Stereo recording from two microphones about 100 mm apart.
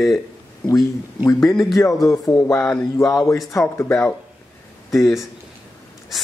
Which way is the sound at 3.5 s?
30° left (ahead or behind).